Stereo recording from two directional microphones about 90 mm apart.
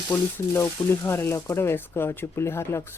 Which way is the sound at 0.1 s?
25° left (ahead or behind).